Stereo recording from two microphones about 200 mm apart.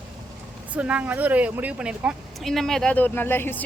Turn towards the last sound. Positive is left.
turn(degrees=10)  # may be behind; listen again after turning